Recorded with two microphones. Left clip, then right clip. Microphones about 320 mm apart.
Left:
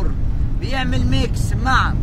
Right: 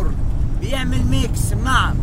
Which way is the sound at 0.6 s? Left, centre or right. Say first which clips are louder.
Left 1 dB; centre.